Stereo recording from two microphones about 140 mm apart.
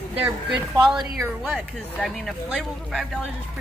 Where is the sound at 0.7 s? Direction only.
30° right (ahead or behind).